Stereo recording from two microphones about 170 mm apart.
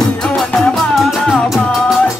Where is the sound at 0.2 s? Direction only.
5° left (ahead or behind).